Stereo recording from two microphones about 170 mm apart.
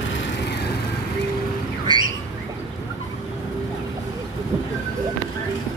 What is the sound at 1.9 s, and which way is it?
Bird, 25° right (ahead or behind).